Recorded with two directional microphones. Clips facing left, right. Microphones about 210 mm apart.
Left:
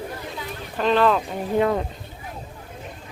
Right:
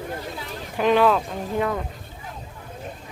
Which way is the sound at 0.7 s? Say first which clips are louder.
Right 1 dB; 10° right (ahead or behind).